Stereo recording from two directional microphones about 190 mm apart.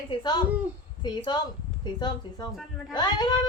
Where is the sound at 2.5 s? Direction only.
Centre (ahead or behind).